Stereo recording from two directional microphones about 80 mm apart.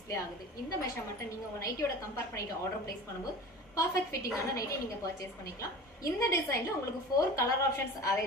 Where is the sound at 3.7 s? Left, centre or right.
Left.